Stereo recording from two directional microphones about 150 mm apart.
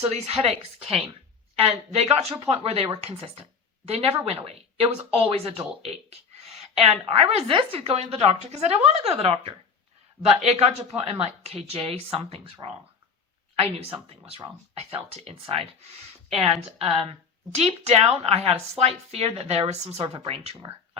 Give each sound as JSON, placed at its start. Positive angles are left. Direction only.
{"t": 0.0, "sound": "speech", "side_deg": -45}
{"t": 13.6, "sound": "speech", "side_deg": -40}